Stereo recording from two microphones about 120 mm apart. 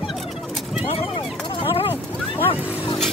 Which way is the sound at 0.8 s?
55° left (ahead or behind).